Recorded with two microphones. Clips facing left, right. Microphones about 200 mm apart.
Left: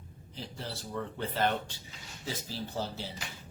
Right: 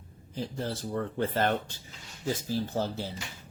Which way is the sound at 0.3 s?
50° right (ahead or behind).